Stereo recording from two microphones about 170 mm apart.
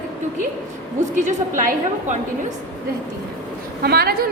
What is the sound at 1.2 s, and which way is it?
Speech, 50° right (ahead or behind).